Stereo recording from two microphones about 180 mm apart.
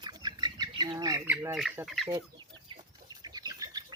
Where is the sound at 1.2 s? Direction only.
10° right (ahead or behind).